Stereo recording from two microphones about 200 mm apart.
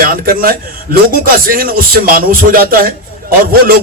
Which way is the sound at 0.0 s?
45° right (ahead or behind).